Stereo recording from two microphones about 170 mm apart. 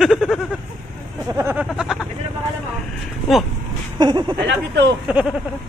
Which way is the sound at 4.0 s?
25° right (ahead or behind).